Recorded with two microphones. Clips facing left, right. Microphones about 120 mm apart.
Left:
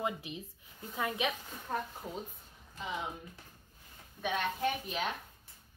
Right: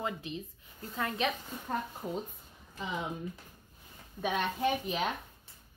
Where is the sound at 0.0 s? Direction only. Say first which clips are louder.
Even; 15° left (ahead or behind).